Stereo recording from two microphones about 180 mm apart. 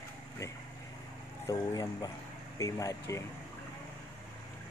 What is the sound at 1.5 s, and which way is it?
Speech, 20° left (ahead or behind).